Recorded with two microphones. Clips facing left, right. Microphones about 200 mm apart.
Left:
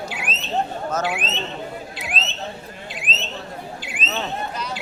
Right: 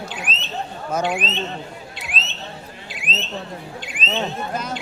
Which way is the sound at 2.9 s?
Centre (ahead or behind).